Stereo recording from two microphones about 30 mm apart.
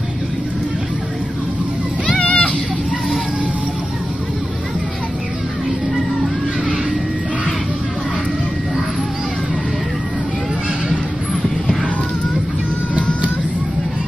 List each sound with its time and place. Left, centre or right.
2.1 s children playing: left